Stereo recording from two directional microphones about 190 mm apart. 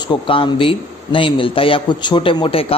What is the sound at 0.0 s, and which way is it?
A man's voice, 25° left (ahead or behind).